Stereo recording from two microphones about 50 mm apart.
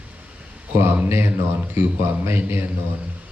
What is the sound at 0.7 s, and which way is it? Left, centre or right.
Speech, right.